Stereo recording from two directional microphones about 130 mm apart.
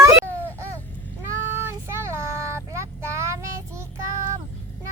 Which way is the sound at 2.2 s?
20° right (ahead or behind).